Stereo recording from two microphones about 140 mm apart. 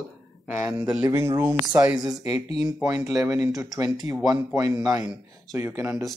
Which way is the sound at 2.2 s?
45° left (ahead or behind).